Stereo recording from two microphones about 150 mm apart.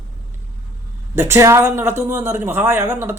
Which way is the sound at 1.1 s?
20° right (ahead or behind).